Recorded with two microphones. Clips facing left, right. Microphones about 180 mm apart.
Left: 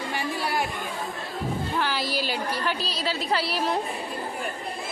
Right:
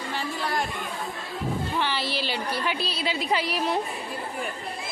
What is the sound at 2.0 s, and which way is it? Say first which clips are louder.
A woman's voice: left 1 dB; 40° left (ahead or behind).